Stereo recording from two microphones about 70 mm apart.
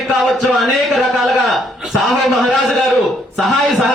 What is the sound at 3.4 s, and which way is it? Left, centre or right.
Speech, centre.